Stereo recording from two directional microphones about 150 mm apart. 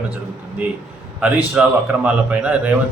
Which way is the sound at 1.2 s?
10° right (ahead or behind).